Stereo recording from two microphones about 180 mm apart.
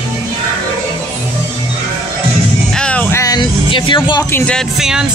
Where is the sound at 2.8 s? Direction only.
5° left (ahead or behind); by 4.3 s 25° left (ahead or behind).